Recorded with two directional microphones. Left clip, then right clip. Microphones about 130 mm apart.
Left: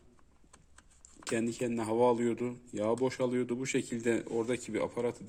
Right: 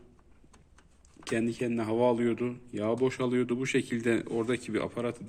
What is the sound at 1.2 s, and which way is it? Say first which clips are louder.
Speech: right 3 dB; 30° left (ahead or behind).